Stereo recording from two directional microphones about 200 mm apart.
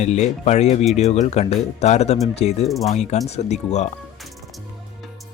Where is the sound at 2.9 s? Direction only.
35° left (ahead or behind).